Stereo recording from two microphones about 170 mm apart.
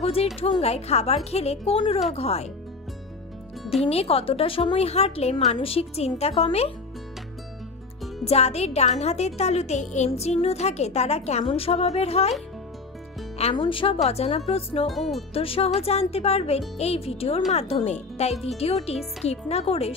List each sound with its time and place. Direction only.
0.0 s speech: 35° left (ahead or behind)
3.8 s speech: 35° left (ahead or behind)
8.2 s speech: 40° left (ahead or behind)
13.4 s speech: 30° left (ahead or behind)
14.9 s speech: centre (ahead or behind)
15.3 s speech: 35° left (ahead or behind)